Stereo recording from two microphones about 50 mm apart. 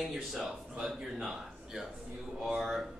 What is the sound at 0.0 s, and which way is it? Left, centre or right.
A man's voice, centre.